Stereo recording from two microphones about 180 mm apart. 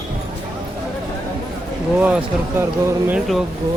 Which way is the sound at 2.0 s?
5° right (ahead or behind).